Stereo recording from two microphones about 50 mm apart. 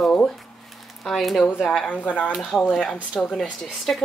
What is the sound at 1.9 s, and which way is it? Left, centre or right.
Speech, left.